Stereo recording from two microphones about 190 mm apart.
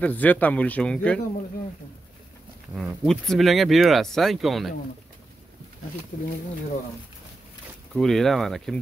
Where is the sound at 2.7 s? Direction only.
Centre (ahead or behind).